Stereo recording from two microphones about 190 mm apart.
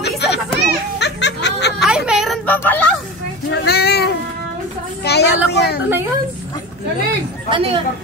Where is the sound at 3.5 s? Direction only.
60° left (ahead or behind).